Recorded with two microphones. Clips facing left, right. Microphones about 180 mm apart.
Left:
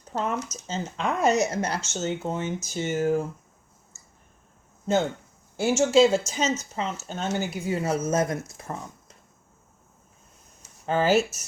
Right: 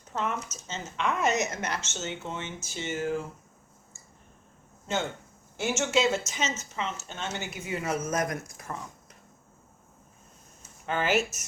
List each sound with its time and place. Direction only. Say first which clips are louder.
0.1 s speech: left 4 dB; 35° left (ahead or behind)
5.5 s speech: left 8 dB; 35° left (ahead or behind)
10.8 s speech: left 5 dB; 35° left (ahead or behind)